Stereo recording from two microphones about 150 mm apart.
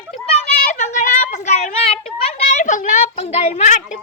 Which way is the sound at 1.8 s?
40° left (ahead or behind).